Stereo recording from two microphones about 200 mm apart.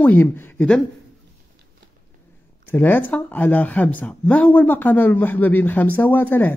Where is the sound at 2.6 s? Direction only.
10° left (ahead or behind).